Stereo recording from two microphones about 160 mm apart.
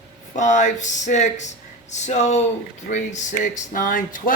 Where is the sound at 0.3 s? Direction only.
50° left (ahead or behind).